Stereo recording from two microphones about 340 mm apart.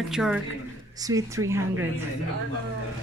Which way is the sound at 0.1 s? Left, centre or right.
Centre.